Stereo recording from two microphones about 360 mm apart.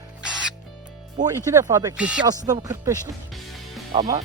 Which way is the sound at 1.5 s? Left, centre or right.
Centre.